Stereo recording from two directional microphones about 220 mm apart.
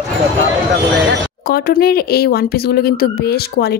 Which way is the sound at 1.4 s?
45° left (ahead or behind).